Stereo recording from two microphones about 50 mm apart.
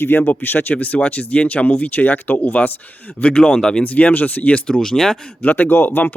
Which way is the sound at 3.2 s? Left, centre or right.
Centre.